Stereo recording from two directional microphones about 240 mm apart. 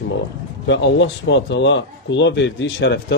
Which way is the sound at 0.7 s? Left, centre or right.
Left.